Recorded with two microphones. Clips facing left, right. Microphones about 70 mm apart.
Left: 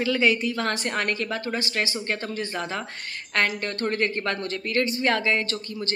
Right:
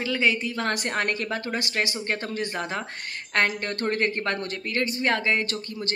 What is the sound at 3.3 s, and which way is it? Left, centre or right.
Speech, right.